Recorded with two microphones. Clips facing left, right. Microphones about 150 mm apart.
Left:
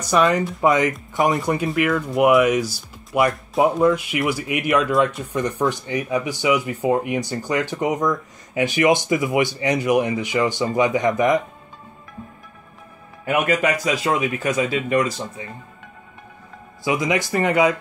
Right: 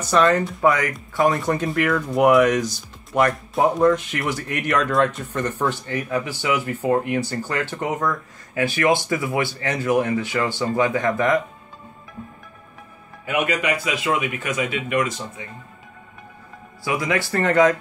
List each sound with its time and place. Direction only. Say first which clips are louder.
0.1 s speech: even; 10° left (ahead or behind)
13.2 s speech: left 3 dB; 45° left (ahead or behind)
16.8 s speech: left 2 dB; 20° left (ahead or behind)